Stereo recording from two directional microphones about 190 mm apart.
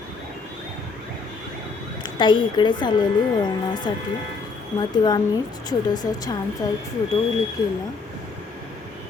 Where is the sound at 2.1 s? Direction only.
25° left (ahead or behind).